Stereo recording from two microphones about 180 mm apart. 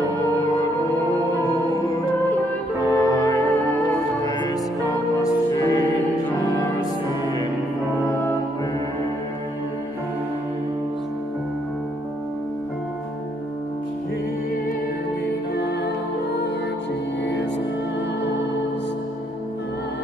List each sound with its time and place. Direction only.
2.8 s music: 20° left (ahead or behind)
15.5 s music: 70° left (ahead or behind)
17.2 s music: 80° left